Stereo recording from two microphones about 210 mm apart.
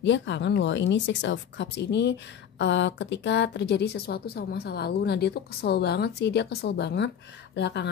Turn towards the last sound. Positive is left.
turn(degrees=55)  # may be behind; listen again after turning